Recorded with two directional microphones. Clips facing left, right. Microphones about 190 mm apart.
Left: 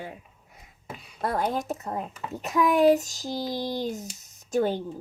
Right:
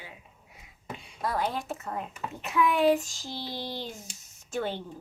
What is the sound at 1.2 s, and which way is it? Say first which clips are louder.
Speech: left 3 dB; 50° left (ahead or behind).